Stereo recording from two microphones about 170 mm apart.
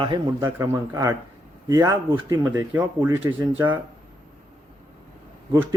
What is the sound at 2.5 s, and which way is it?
Speech, 10° right (ahead or behind).